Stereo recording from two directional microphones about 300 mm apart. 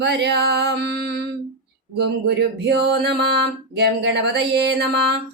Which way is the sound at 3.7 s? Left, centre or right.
Right.